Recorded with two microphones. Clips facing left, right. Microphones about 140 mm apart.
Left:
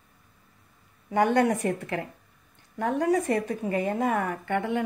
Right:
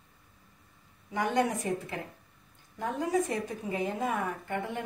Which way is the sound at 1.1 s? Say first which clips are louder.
Left 6 dB; 65° left (ahead or behind).